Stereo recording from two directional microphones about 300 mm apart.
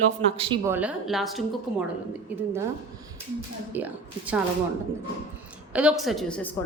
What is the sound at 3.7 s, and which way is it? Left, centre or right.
Speech, centre.